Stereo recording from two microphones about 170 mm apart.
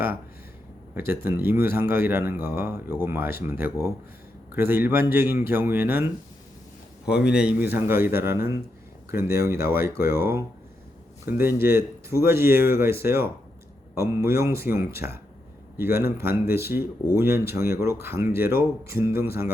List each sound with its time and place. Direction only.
0.9 s a man's voice: 10° right (ahead or behind)